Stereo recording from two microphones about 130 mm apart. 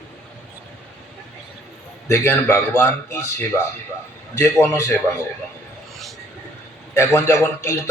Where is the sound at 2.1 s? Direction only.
20° left (ahead or behind).